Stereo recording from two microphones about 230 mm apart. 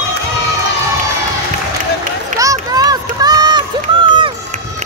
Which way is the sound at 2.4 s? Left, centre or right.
Centre.